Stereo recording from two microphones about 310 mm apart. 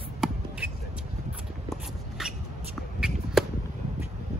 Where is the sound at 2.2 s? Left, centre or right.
Centre.